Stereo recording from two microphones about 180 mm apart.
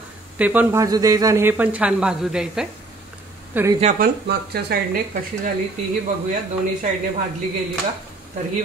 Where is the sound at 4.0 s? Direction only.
60° right (ahead or behind).